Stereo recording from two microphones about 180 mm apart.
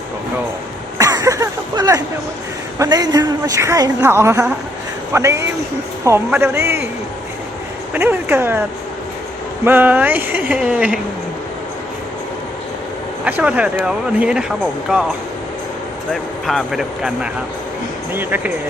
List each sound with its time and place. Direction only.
0.9 s a sound: 15° right (ahead or behind)
5.1 s speech: 15° right (ahead or behind)
7.9 s speech: 10° right (ahead or behind)
9.6 s speech: 10° right (ahead or behind)
13.2 s speech: 10° right (ahead or behind)
16.5 s speech: centre (ahead or behind)